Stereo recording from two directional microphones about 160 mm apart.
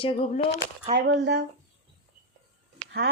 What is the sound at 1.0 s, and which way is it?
Speech, 90° right.